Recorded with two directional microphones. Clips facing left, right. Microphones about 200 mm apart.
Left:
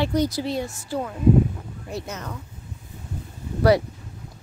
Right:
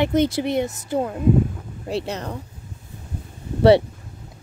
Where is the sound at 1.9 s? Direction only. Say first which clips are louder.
Right 7 dB; 30° right (ahead or behind).